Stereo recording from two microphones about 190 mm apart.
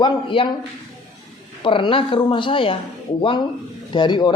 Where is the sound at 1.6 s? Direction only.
25° left (ahead or behind).